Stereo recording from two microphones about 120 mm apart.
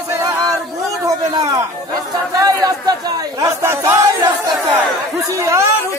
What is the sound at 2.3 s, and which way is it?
Speech, 30° right (ahead or behind).